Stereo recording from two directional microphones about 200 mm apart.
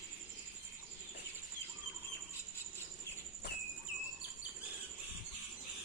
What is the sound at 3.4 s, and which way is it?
Cricket, 55° left (ahead or behind).